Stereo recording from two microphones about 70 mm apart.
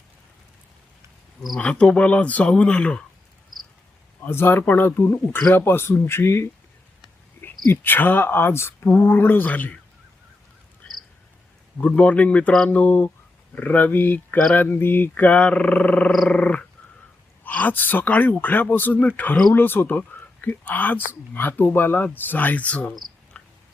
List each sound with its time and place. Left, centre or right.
1.5 s speech: centre
4.2 s a man's voice: left
7.4 s a man's voice: left
11.8 s speech: centre
23.3 s a sound: centre